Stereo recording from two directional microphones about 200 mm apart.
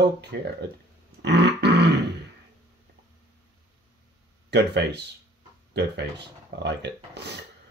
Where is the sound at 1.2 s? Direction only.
60° right (ahead or behind).